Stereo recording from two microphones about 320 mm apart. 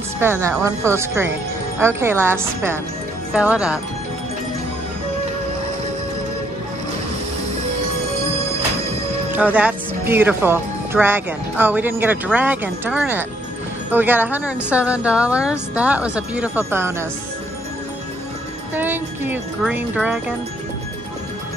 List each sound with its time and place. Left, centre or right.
0.2 s speech: centre
9.3 s speech: centre
18.8 s speech: centre